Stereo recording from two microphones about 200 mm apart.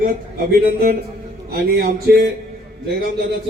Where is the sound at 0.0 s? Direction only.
45° right (ahead or behind).